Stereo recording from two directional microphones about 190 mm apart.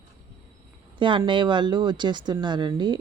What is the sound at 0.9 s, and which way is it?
Speech, 25° right (ahead or behind).